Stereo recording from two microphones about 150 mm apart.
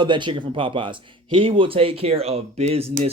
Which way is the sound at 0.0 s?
30° right (ahead or behind).